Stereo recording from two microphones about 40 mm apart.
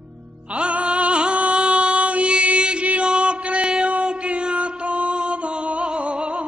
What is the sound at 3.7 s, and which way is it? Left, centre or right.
Music, right.